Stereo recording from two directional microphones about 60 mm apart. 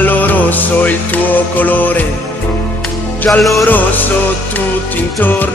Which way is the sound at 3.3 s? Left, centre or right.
Centre.